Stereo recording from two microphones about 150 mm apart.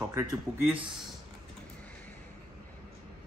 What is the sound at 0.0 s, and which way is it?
Speech, 25° right (ahead or behind).